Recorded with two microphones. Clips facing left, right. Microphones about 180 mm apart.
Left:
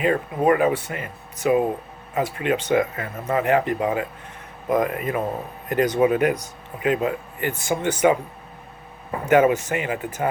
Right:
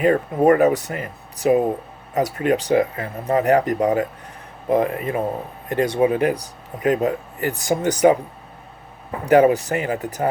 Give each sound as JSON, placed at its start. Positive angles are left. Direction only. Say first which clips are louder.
{"t": 0.0, "sound": "speech", "louder": "right 4 dB", "side_deg": -40}
{"t": 4.7, "sound": "speech", "louder": "right 2 dB", "side_deg": -30}
{"t": 9.2, "sound": "speech", "louder": "right 3 dB", "side_deg": -35}